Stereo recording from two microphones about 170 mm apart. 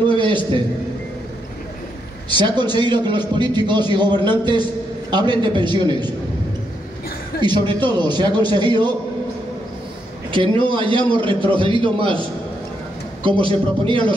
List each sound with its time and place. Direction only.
0.1 s a man's voice: 30° right (ahead or behind)
2.2 s a man's voice: 25° right (ahead or behind)
7.4 s a man's voice: 25° right (ahead or behind)
10.3 s a man's voice: 30° right (ahead or behind)